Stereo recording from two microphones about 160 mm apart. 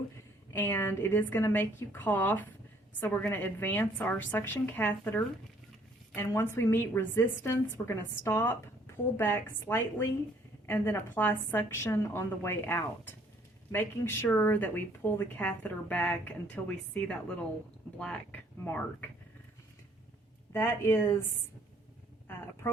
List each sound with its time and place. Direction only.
0.5 s speech: 15° left (ahead or behind)
20.5 s speech: 15° left (ahead or behind)
22.6 s speech: 15° left (ahead or behind)